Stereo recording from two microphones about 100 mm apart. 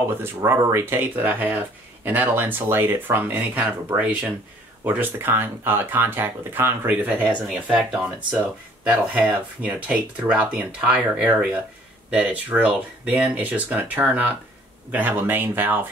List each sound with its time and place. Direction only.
0.2 s speech: 25° right (ahead or behind)
7.7 s speech: centre (ahead or behind); by 15.8 s 20° right (ahead or behind)